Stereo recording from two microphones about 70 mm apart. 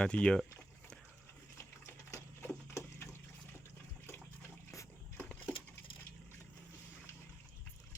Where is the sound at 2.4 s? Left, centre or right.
Left.